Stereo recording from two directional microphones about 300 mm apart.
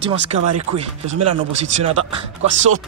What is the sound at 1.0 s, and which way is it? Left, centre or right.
Speech, right.